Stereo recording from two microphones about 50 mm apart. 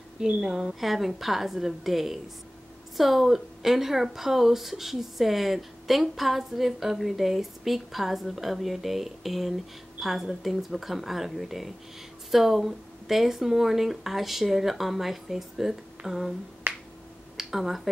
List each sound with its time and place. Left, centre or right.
0.2 s a woman's voice: centre
16.6 s finger snapping: right
17.4 s speech: centre